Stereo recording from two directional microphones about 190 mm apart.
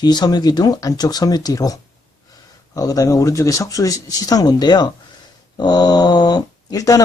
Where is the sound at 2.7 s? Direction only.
20° left (ahead or behind).